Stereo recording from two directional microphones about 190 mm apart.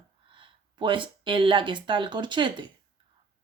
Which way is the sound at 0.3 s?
25° right (ahead or behind).